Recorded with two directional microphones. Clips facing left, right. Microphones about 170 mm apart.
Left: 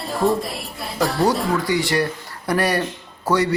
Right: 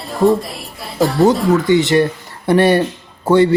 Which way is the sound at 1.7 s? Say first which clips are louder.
Right 8 dB; 25° right (ahead or behind).